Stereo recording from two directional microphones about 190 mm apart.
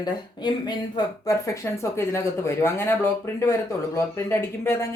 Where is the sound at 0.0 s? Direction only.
20° left (ahead or behind).